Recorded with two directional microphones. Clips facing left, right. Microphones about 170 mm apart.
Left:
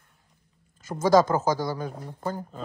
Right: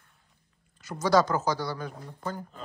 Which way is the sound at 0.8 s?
45° left (ahead or behind).